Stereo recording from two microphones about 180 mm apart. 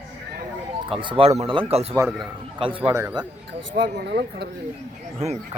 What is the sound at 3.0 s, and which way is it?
Speech, 15° right (ahead or behind).